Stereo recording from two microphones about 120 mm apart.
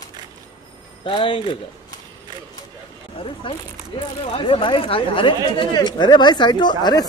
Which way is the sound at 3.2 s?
45° left (ahead or behind).